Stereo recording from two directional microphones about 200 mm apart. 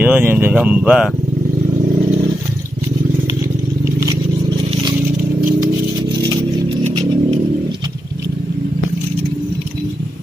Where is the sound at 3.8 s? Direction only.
15° right (ahead or behind).